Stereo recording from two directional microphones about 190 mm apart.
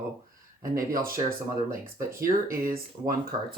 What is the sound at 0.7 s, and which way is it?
Speech, 50° right (ahead or behind).